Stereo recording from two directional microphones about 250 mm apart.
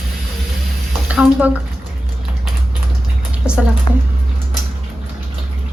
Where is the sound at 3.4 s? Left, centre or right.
Centre.